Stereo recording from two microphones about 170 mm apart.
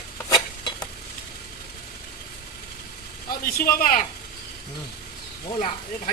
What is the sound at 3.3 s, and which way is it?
Speech, 60° left (ahead or behind).